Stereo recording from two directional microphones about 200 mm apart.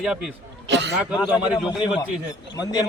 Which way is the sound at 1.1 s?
20° left (ahead or behind).